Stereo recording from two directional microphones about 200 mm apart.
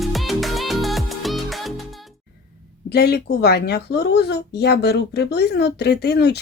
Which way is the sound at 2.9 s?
55° left (ahead or behind).